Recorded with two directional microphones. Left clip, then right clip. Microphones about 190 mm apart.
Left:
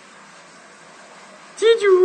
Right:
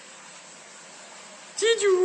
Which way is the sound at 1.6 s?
Centre (ahead or behind).